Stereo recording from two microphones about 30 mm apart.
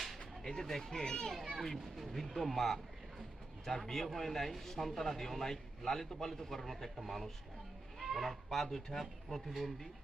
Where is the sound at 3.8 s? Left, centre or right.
Centre.